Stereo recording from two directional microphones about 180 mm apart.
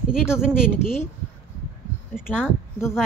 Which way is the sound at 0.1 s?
5° right (ahead or behind).